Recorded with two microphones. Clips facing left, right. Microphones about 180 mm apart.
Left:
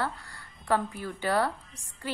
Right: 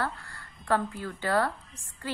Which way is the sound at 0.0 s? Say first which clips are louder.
Even; 15° left (ahead or behind).